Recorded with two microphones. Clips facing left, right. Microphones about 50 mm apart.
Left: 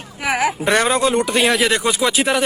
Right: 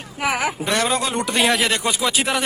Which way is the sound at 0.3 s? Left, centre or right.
Left.